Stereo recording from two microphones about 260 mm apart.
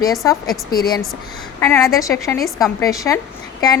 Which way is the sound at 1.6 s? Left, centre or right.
Centre.